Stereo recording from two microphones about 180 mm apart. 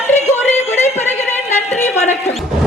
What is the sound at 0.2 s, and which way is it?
Yodeling, 40° left (ahead or behind).